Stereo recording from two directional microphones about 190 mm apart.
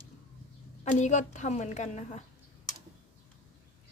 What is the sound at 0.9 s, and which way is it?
A woman's voice, 40° left (ahead or behind).